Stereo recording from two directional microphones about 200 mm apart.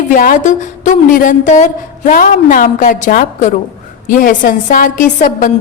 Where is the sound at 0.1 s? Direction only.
40° left (ahead or behind).